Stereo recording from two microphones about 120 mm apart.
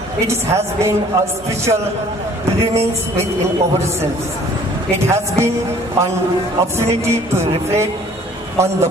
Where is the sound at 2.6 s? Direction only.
25° right (ahead or behind).